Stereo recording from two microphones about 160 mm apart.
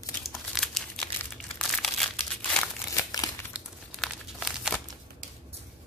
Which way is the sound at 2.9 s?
20° left (ahead or behind).